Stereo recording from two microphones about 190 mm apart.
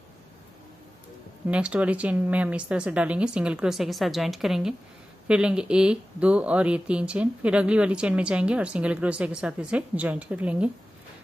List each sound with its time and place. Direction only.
1.5 s speech: 5° right (ahead or behind)